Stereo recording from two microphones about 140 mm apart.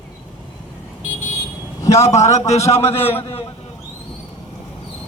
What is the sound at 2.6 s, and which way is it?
Speech, 15° left (ahead or behind).